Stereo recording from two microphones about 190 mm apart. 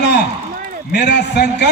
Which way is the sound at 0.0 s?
65° left (ahead or behind).